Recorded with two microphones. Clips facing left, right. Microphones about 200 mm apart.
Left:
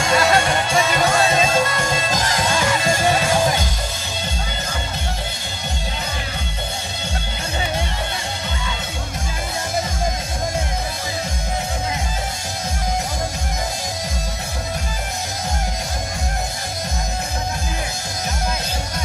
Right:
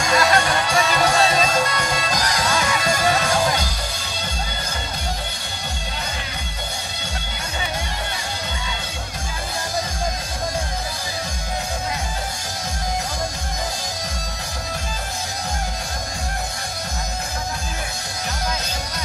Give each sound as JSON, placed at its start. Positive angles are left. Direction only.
{"t": 0.1, "sound": "music", "side_deg": 25}